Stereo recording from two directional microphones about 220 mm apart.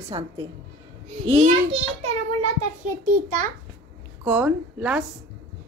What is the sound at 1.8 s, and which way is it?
Speech, 75° right (ahead or behind).